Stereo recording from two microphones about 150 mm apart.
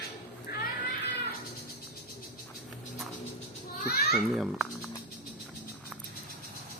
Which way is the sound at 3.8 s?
90° left.